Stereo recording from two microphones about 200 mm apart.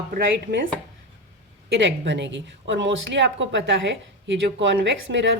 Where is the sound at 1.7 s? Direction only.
65° right (ahead or behind).